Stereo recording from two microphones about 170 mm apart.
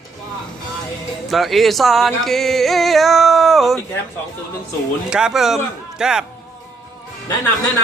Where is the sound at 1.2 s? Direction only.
Centre (ahead or behind).